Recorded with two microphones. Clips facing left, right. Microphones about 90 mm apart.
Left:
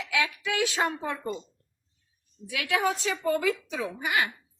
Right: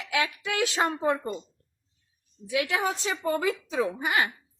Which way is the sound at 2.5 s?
25° right (ahead or behind).